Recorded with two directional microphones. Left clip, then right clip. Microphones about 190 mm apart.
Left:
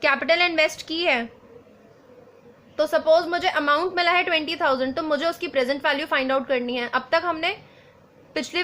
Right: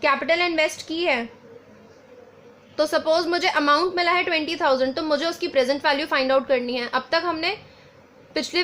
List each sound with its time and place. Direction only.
0.0 s a woman's voice: 25° right (ahead or behind)
2.7 s a woman's voice: 30° right (ahead or behind)